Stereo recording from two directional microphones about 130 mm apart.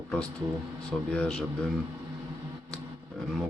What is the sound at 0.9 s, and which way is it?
Speech, 5° left (ahead or behind).